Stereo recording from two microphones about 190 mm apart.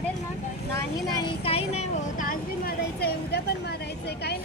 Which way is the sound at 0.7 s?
20° left (ahead or behind).